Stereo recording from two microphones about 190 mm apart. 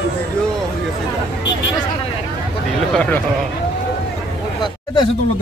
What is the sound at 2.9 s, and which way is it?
Speech, 10° left (ahead or behind).